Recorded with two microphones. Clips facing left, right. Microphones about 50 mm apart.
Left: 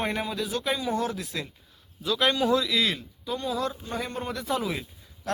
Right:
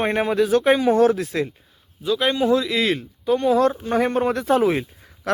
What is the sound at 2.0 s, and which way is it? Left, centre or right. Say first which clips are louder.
Speech: right 4 dB; centre.